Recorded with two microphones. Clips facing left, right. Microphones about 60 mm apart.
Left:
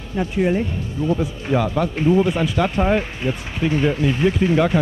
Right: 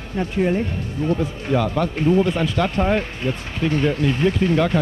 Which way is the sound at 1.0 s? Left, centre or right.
Right.